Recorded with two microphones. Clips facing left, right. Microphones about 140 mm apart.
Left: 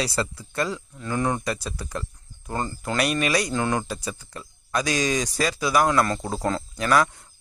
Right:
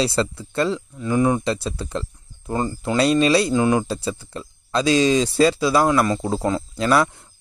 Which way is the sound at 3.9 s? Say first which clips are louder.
Right 6 dB; 30° right (ahead or behind).